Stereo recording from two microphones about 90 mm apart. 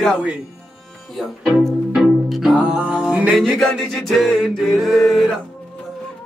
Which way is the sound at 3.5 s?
5° left (ahead or behind).